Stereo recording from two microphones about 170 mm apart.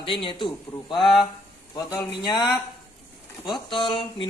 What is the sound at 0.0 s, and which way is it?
Speech, 30° left (ahead or behind).